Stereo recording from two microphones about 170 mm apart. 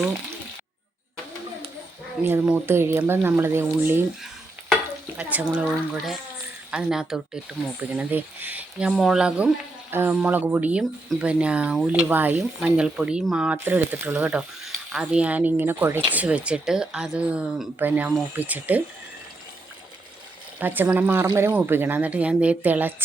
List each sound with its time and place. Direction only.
2.2 s speech: 15° right (ahead or behind)
5.1 s a woman's voice: 10° right (ahead or behind)
20.6 s speech: 10° right (ahead or behind)